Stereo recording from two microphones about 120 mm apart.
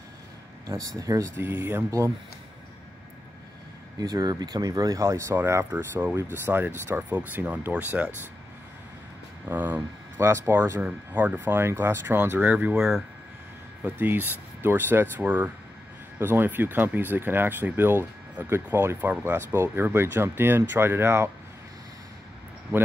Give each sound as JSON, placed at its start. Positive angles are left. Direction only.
{"t": 0.7, "sound": "speech", "side_deg": -25}
{"t": 4.0, "sound": "speech", "side_deg": -35}
{"t": 9.5, "sound": "speech", "side_deg": -15}